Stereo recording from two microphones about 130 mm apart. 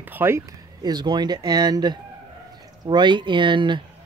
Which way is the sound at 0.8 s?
30° right (ahead or behind).